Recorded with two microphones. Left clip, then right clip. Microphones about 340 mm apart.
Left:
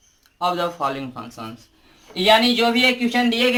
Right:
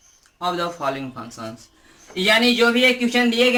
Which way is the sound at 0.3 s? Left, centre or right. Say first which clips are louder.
Left 2 dB; centre.